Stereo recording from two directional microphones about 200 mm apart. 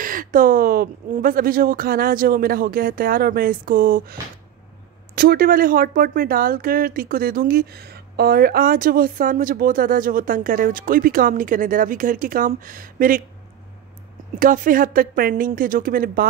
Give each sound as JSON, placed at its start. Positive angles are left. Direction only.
{"t": 0.0, "sound": "speech", "side_deg": -45}
{"t": 14.4, "sound": "speech", "side_deg": -45}